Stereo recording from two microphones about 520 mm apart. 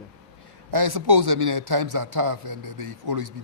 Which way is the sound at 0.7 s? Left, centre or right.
Right.